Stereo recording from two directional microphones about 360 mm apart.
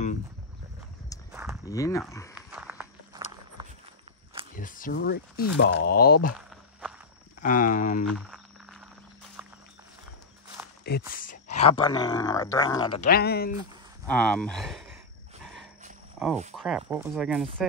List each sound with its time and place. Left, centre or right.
1.3 s a sound: centre
1.7 s speech: centre
2.3 s walk: centre
4.6 s speech: left
6.3 s walk: centre
7.4 s speech: left
8.1 s frog: centre
9.4 s music: centre
10.8 s speech: left
13.1 s speech: left
14.0 s speech: centre
16.2 s speech: centre